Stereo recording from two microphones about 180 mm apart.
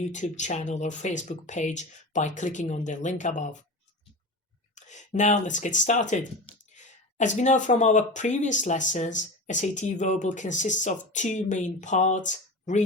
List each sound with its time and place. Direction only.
0.1 s speech: 40° left (ahead or behind)
4.7 s speech: 40° left (ahead or behind)